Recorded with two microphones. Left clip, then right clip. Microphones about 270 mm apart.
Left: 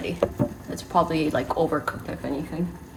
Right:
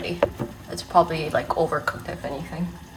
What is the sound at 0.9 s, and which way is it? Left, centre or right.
Speech, right.